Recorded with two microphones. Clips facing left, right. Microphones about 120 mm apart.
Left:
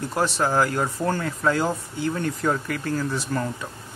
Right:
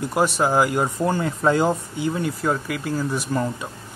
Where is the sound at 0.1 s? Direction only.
15° right (ahead or behind).